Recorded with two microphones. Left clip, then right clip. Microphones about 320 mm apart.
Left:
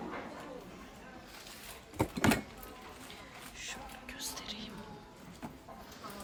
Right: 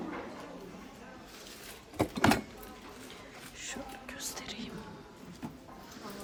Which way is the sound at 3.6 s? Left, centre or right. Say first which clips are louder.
Right 2 dB; centre.